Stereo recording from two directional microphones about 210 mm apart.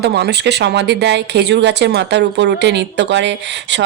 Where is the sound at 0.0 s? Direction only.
50° right (ahead or behind).